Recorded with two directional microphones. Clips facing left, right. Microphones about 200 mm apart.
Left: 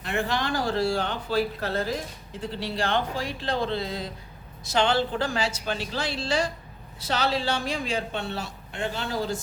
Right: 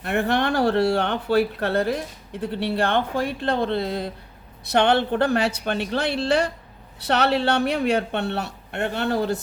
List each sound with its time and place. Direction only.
0.0 s speech: 60° right (ahead or behind)